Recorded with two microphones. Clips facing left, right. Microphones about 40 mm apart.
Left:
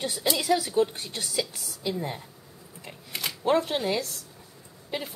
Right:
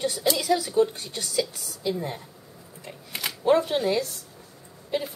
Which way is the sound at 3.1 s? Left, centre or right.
Centre.